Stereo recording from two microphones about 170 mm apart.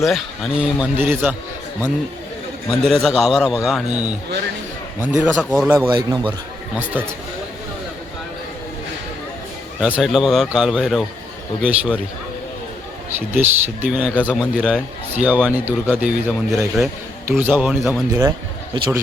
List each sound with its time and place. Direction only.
0.0 s speech: centre (ahead or behind)
2.6 s a man's voice: centre (ahead or behind)
5.9 s a man's voice: 25° right (ahead or behind)
6.7 s speech: 10° right (ahead or behind)
9.8 s a man's voice: 5° right (ahead or behind)
13.1 s a man's voice: 10° right (ahead or behind)
18.1 s a man's voice: 20° right (ahead or behind)